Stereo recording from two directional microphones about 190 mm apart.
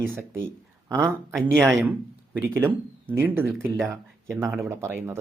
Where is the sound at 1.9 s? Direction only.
10° right (ahead or behind).